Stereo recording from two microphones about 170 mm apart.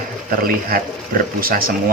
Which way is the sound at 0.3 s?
60° right (ahead or behind).